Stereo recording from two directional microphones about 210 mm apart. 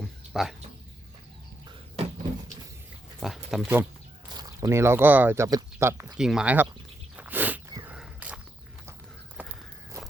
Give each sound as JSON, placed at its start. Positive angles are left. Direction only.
{"t": 0.3, "sound": "speech", "side_deg": 0}
{"t": 3.2, "sound": "speech", "side_deg": 0}
{"t": 4.4, "sound": "speech", "side_deg": -15}
{"t": 7.2, "sound": "a sound", "side_deg": -10}
{"t": 9.4, "sound": "walk", "side_deg": -5}